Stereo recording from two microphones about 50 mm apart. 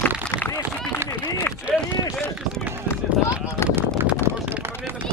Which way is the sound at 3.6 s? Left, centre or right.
Left.